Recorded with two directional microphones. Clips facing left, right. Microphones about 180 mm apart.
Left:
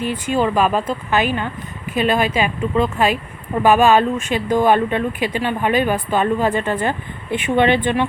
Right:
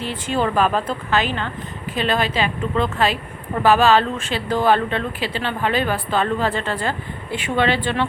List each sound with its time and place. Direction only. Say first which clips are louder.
0.0 s speech: left 3 dB; 15° left (ahead or behind)